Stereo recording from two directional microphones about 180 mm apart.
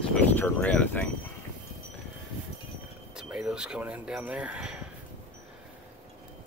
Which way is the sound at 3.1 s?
5° right (ahead or behind).